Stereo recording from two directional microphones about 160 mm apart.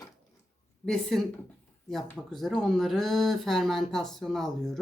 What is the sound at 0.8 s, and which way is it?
Speech, centre (ahead or behind).